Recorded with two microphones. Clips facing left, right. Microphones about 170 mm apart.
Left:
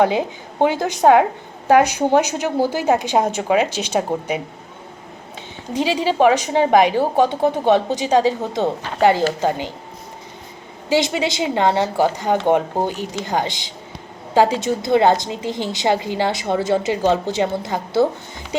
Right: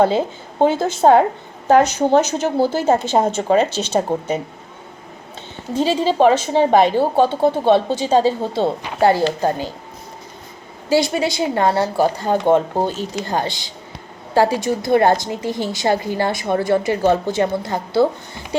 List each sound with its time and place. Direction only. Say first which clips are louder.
0.0 s a woman's voice: right 1 dB; 15° left (ahead or behind)
5.7 s a woman's voice: right 2 dB; 15° left (ahead or behind)
10.8 s a woman's voice: right 1 dB; 20° left (ahead or behind)